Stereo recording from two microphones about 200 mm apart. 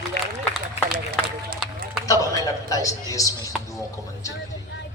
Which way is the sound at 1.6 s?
5° right (ahead or behind).